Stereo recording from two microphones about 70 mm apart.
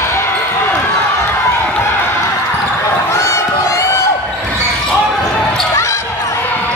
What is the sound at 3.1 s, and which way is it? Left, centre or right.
Crowd, left.